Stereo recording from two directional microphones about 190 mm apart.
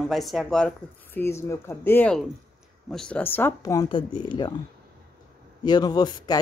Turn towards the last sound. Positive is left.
turn(degrees=20)  # may be behind; listen again after turning